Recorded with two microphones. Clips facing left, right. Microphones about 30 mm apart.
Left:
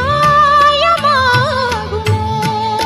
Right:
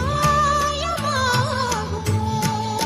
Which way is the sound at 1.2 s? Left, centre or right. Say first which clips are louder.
Left 8 dB; left.